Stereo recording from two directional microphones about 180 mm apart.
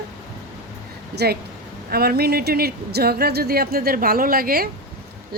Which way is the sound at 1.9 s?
60° right (ahead or behind).